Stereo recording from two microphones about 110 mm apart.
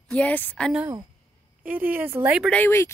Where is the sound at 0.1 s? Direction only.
15° left (ahead or behind).